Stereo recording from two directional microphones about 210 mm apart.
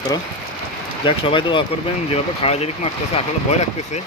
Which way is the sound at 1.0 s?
25° left (ahead or behind).